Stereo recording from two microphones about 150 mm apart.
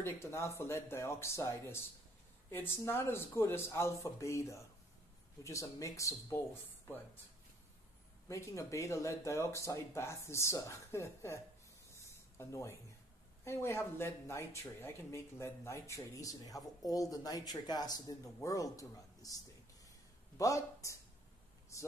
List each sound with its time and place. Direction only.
0.0 s speech: 20° left (ahead or behind)
8.3 s speech: 20° left (ahead or behind)
11.9 s a sound: 15° left (ahead or behind)
13.4 s speech: 20° left (ahead or behind)